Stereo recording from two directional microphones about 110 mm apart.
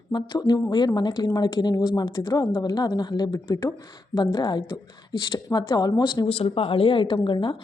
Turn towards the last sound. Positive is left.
turn(degrees=45)  # may be behind; listen again after turning